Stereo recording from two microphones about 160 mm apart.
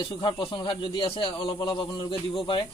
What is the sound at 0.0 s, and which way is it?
A man's voice, 30° left (ahead or behind).